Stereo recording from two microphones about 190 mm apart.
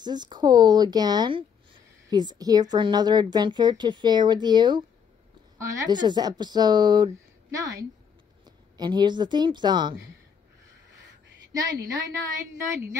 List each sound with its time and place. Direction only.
0.0 s a woman's voice: 20° right (ahead or behind)
11.7 s a woman's voice: 50° right (ahead or behind)